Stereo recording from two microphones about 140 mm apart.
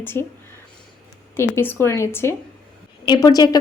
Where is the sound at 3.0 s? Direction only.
30° left (ahead or behind).